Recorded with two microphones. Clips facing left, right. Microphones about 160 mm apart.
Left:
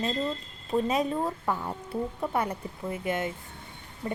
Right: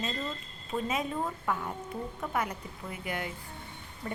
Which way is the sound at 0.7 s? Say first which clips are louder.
Left 6 dB; 35° left (ahead or behind).